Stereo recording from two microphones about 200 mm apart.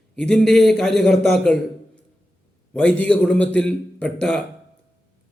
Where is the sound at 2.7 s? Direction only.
5° left (ahead or behind).